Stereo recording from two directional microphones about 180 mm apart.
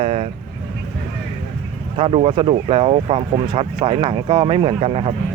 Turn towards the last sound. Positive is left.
turn(degrees=-30)  # may be behind; listen again after turning